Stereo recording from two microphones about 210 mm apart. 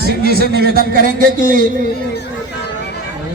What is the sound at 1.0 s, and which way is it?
Music, 40° right (ahead or behind).